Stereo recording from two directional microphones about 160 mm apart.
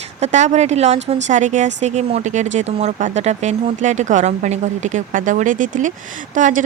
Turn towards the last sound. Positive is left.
turn(degrees=-55)  # may be behind; listen again after turning